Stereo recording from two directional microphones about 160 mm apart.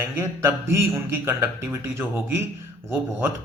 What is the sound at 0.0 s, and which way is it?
A man's voice, 15° right (ahead or behind).